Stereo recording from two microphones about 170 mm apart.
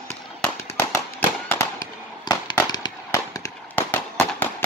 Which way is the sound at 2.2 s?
25° left (ahead or behind).